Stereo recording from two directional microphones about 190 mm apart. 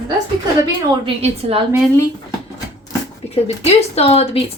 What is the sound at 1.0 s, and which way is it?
Speech, 30° right (ahead or behind).